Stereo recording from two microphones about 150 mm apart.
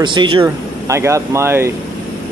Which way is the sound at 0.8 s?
20° right (ahead or behind).